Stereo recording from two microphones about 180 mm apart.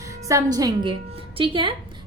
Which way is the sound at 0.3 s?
20° right (ahead or behind).